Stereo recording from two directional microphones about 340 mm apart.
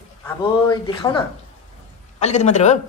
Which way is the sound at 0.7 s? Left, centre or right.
Centre.